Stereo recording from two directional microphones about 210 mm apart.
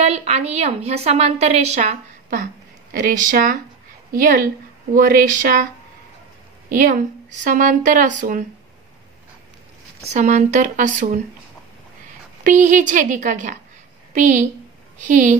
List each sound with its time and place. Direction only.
0.0 s a woman's voice: 30° right (ahead or behind)
6.7 s a woman's voice: 40° right (ahead or behind)
10.1 s a woman's voice: 35° right (ahead or behind)
12.4 s a woman's voice: 35° right (ahead or behind)